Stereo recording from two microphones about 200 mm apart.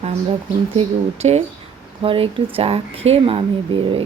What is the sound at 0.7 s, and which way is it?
Speech, 30° right (ahead or behind).